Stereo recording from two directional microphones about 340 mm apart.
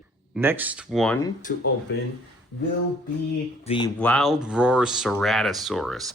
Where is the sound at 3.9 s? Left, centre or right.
Centre.